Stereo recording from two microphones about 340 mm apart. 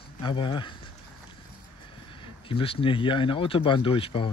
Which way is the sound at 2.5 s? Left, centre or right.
Centre.